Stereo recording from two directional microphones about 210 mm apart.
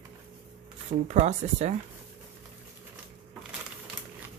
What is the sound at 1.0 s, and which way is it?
Speech, 35° right (ahead or behind).